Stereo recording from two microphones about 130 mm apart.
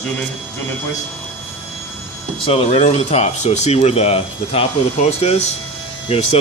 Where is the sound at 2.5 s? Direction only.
45° left (ahead or behind).